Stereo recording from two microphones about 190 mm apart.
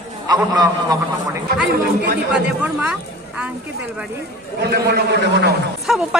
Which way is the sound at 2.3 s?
5° right (ahead or behind).